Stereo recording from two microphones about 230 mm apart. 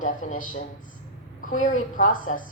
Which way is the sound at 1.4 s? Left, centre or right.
Left.